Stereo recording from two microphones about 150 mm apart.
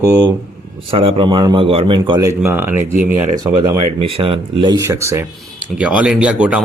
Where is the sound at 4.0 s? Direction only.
40° right (ahead or behind).